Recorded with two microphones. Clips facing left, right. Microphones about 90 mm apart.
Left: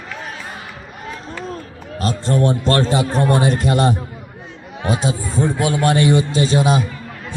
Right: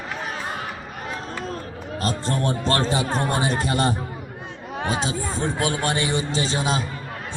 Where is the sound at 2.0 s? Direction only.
Centre (ahead or behind).